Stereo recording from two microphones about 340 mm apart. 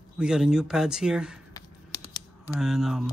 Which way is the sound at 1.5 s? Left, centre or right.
Centre.